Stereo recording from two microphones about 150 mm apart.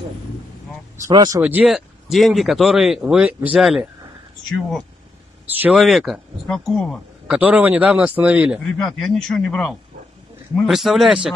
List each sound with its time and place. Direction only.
0.9 s speech: 25° right (ahead or behind)
1.4 s speech: 5° right (ahead or behind)
7.3 s speech: 10° right (ahead or behind)